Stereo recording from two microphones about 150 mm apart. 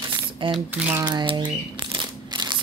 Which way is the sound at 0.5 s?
10° right (ahead or behind).